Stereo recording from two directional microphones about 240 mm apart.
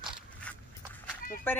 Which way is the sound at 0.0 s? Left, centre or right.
Centre.